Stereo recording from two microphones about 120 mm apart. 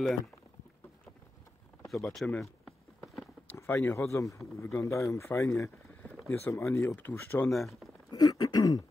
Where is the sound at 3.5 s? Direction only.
20° left (ahead or behind).